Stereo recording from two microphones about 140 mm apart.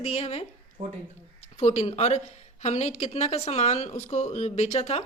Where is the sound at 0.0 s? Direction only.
45° left (ahead or behind).